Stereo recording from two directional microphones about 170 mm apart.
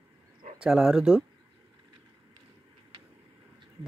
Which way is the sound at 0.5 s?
5° right (ahead or behind).